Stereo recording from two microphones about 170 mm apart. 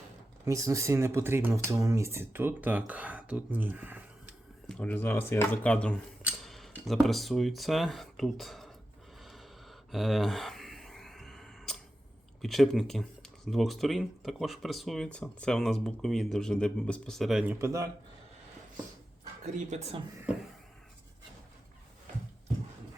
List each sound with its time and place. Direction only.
0.4 s speech: 20° right (ahead or behind)
4.7 s speech: 10° left (ahead or behind)
6.2 s a sound: centre (ahead or behind)
6.8 s speech: centre (ahead or behind)
9.2 s a sound: centre (ahead or behind)
12.4 s speech: centre (ahead or behind); by 17.8 s 15° right (ahead or behind)
19.7 s speech: 40° right (ahead or behind)